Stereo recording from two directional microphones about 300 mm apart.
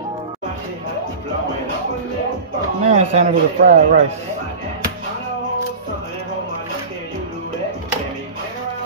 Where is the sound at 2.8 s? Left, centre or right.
Right.